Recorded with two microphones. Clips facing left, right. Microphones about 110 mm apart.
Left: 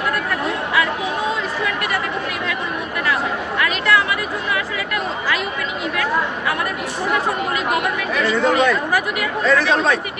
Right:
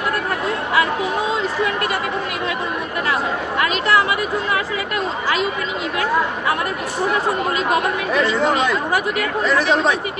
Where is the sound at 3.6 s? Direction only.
30° right (ahead or behind).